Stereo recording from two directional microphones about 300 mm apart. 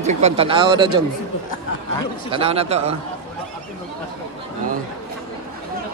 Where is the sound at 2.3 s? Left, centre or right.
Centre.